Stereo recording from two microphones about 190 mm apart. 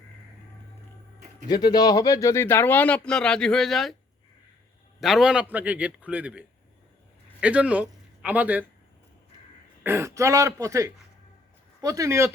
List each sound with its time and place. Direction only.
1.5 s speech: 20° left (ahead or behind); by 3.9 s centre (ahead or behind)
4.9 s a man's voice: centre (ahead or behind)
9.8 s a man's voice: 15° right (ahead or behind)